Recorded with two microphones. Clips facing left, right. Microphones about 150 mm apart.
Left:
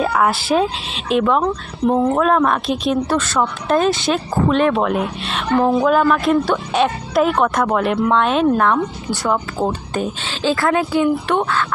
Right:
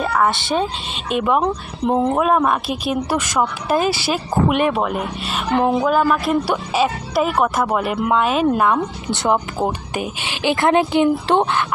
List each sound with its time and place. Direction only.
0.0 s speech: 5° left (ahead or behind)
1.1 s speech: 10° right (ahead or behind)
1.4 s speech: 20° right (ahead or behind)
2.2 s speech: 5° right (ahead or behind)
5.5 s speech: 20° right (ahead or behind)
5.8 s speech: 5° right (ahead or behind)
9.0 s speech: 20° right (ahead or behind)